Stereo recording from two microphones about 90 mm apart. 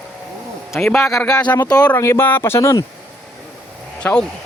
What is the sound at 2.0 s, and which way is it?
Speech, 30° left (ahead or behind).